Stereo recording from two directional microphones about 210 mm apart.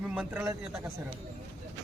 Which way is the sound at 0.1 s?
5° right (ahead or behind).